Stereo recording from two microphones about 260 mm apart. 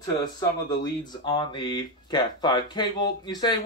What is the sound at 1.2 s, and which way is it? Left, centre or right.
Speech, centre.